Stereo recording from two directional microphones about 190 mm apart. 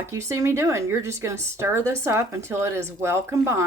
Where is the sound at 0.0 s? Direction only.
15° right (ahead or behind).